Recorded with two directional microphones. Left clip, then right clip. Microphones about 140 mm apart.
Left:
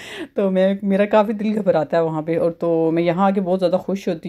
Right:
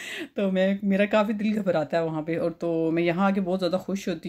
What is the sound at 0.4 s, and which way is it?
Speech, 30° left (ahead or behind).